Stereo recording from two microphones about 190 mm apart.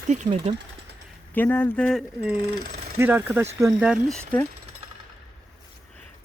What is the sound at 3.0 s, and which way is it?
Speech, 10° right (ahead or behind).